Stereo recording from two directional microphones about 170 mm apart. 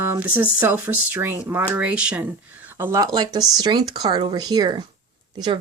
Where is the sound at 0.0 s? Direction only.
10° right (ahead or behind).